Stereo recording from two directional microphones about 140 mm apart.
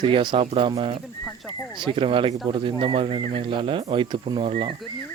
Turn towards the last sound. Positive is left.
turn(degrees=-40)  # may be behind; listen again after turning